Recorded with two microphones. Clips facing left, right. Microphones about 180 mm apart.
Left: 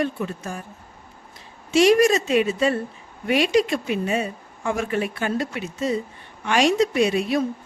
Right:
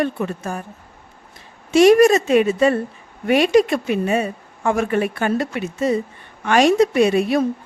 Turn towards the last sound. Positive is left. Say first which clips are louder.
# right 4 dB
turn(degrees=-55)  # may be behind; listen again after turning